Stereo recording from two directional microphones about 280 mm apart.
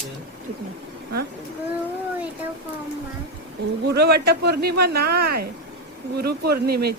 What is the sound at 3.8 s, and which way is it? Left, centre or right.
Speech, right.